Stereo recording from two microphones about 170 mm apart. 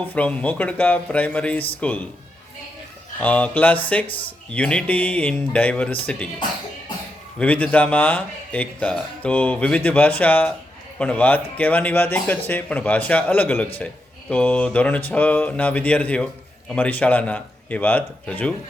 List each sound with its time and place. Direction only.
0.0 s speech: 10° left (ahead or behind)
3.2 s speech: 10° left (ahead or behind)
7.3 s speech: 10° left (ahead or behind)